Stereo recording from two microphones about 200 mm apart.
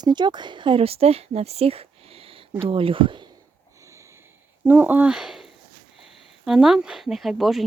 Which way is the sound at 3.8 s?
15° right (ahead or behind).